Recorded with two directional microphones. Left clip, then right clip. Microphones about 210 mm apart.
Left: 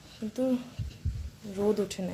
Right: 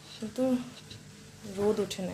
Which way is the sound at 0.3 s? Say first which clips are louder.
Even; 15° left (ahead or behind).